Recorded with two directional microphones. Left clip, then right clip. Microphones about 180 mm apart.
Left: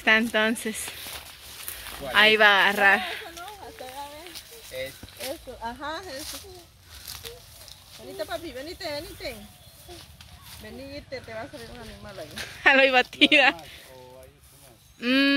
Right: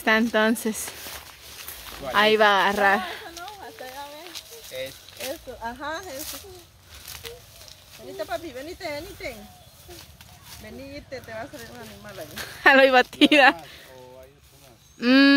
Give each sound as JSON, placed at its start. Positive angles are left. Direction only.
{"t": 0.0, "sound": "speech", "side_deg": -25}
{"t": 1.9, "sound": "a sound", "side_deg": 0}
{"t": 2.1, "sound": "speech", "side_deg": -25}
{"t": 3.4, "sound": "a sound", "side_deg": 5}
{"t": 7.2, "sound": "a sound", "side_deg": 30}
{"t": 8.2, "sound": "speech", "side_deg": 5}
{"t": 10.9, "sound": "speech", "side_deg": 10}
{"t": 12.4, "sound": "speech", "side_deg": -25}
{"t": 15.0, "sound": "speech", "side_deg": -45}